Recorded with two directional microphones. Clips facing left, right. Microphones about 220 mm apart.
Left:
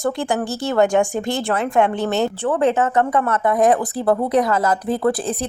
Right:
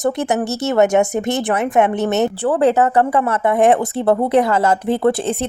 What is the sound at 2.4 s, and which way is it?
Speech, 35° right (ahead or behind).